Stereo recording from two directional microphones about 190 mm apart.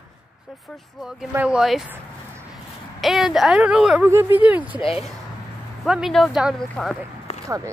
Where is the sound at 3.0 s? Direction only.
Centre (ahead or behind).